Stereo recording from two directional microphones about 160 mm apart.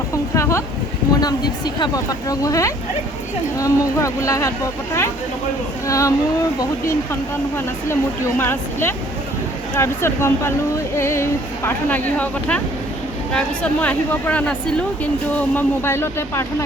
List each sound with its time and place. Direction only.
0.3 s a sound: 15° left (ahead or behind)
1.2 s speech: 25° left (ahead or behind)
5.9 s speech: 20° left (ahead or behind)